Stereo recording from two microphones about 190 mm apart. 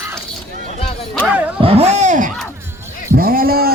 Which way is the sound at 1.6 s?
30° right (ahead or behind).